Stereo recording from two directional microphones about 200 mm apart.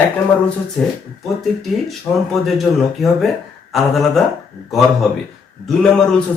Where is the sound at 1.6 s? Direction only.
Centre (ahead or behind).